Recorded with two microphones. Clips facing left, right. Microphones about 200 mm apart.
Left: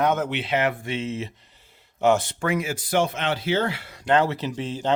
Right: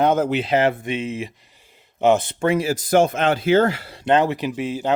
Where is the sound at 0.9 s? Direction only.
15° right (ahead or behind); by 3.9 s 40° right (ahead or behind).